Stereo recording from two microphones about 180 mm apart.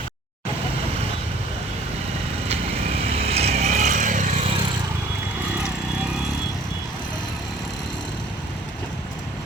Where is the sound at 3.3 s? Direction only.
35° right (ahead or behind).